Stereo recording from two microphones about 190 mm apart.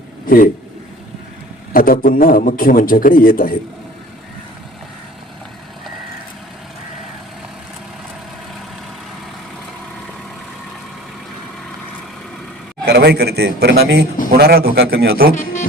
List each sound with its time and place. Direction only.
0.3 s a man's voice: 50° left (ahead or behind)
1.7 s a man's voice: 45° left (ahead or behind)
12.8 s a man's voice: 55° right (ahead or behind)